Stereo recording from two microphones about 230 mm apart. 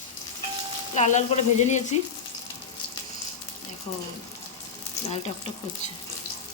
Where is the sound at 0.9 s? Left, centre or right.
Left.